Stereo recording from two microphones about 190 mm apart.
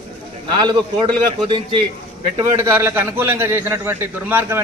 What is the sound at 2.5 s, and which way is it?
A man's voice, 10° right (ahead or behind).